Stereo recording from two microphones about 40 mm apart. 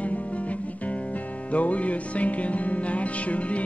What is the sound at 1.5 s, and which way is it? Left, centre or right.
Music, left.